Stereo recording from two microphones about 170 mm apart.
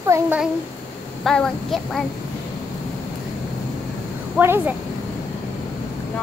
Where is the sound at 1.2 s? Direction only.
5° left (ahead or behind).